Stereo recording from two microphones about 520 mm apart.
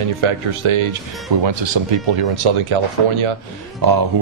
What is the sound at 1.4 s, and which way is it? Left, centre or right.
Speech, right.